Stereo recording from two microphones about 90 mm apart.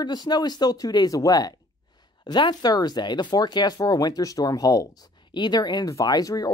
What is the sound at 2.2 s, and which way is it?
Speech, 55° left (ahead or behind).